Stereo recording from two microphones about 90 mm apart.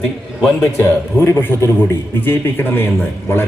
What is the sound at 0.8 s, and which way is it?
A man's voice, 30° left (ahead or behind).